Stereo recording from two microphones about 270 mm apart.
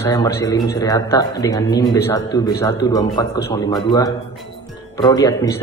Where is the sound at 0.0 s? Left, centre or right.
Centre.